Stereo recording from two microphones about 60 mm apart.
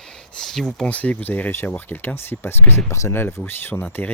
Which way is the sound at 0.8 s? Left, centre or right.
Left.